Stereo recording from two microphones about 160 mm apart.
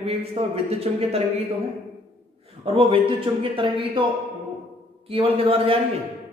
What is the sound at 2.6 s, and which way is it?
Speech, 35° right (ahead or behind).